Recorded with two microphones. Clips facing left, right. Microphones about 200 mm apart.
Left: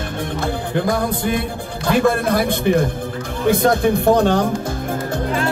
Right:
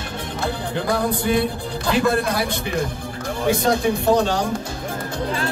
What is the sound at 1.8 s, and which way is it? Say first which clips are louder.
Speech: left 3 dB; 50° left (ahead or behind).